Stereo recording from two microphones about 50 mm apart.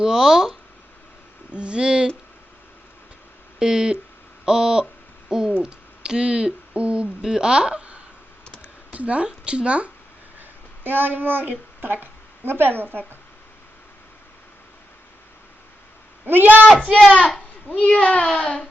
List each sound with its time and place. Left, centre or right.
0.0 s speech: centre
1.5 s speech: right
3.6 s speech: centre
7.2 s speech: centre
10.8 s child singing: right
12.5 s a woman's voice: right
16.2 s child singing: right
17.7 s speech: left